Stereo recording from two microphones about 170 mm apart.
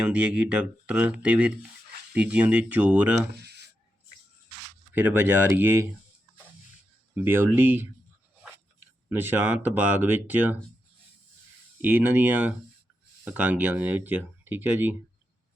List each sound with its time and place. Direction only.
0.0 s speech: 5° right (ahead or behind)
3.3 s a sound: 75° right (ahead or behind)
4.9 s speech: 10° right (ahead or behind)
7.1 s speech: 10° right (ahead or behind)
9.0 s speech: 10° right (ahead or behind)
11.8 s speech: 10° right (ahead or behind)